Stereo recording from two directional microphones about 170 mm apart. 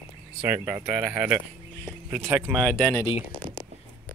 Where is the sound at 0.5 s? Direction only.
10° right (ahead or behind).